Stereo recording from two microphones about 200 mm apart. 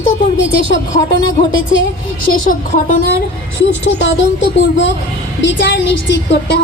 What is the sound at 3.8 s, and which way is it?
A woman's voice, 65° left (ahead or behind).